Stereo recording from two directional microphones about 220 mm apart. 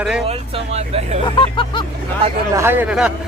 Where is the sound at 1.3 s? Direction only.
20° left (ahead or behind).